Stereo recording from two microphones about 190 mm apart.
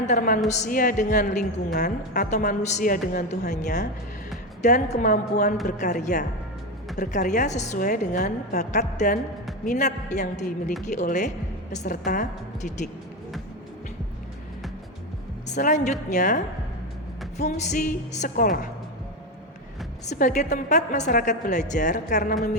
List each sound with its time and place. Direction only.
0.0 s a woman's voice: 45° left (ahead or behind)
15.4 s a woman's voice: 40° left (ahead or behind)
20.1 s a woman's voice: 40° left (ahead or behind)